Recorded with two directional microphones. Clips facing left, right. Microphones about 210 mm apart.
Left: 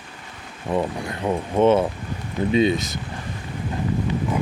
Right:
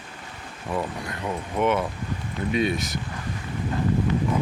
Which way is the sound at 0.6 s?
25° left (ahead or behind).